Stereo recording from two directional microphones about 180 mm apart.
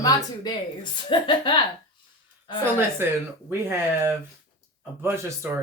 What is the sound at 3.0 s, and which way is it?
Speech, 10° right (ahead or behind).